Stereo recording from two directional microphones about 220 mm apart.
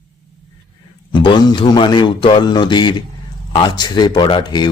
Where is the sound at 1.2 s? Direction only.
20° left (ahead or behind).